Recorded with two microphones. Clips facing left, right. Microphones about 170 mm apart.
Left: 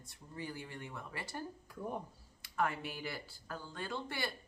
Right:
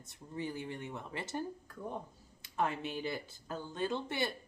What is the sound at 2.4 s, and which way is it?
A woman's voice, 20° right (ahead or behind).